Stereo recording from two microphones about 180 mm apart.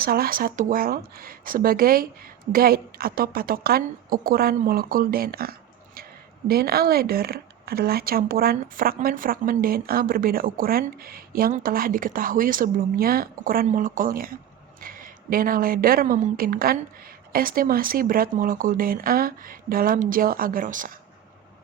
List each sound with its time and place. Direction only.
0.0 s a woman's voice: 55° right (ahead or behind)